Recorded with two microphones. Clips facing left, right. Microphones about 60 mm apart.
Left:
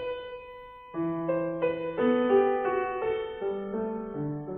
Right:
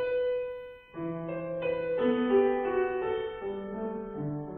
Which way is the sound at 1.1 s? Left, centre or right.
Left.